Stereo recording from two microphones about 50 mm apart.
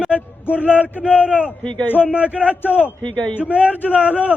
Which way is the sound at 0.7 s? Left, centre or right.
Right.